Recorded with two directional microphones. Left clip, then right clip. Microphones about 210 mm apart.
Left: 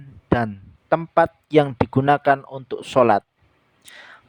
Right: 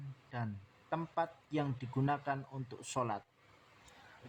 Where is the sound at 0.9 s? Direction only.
50° left (ahead or behind).